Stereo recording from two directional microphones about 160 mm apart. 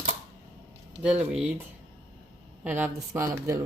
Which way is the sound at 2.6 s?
15° right (ahead or behind).